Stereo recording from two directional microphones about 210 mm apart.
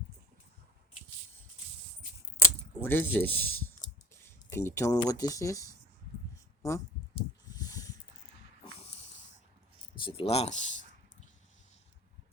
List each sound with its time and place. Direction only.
2.8 s speech: 10° left (ahead or behind)
4.5 s speech: 15° left (ahead or behind)
7.2 s snake: 15° left (ahead or behind)
10.0 s speech: 25° left (ahead or behind)